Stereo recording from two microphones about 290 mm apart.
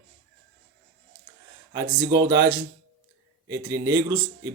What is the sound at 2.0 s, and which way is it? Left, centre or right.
Speech, right.